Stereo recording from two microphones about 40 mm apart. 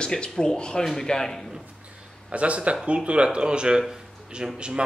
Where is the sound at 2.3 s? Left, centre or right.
Right.